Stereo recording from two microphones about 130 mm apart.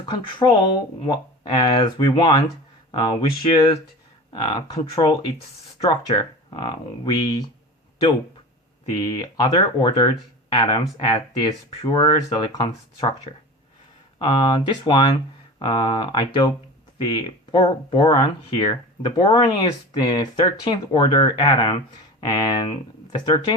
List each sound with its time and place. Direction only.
0.0 s speech: 40° left (ahead or behind)
9.0 s speech: 30° left (ahead or behind)
11.8 s speech: 35° left (ahead or behind)